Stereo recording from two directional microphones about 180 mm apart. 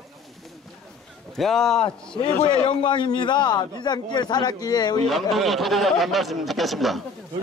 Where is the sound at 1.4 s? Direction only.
Centre (ahead or behind).